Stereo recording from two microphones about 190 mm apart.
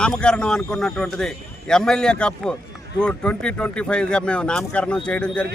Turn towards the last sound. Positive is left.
turn(degrees=5)  # may be behind; listen again after turning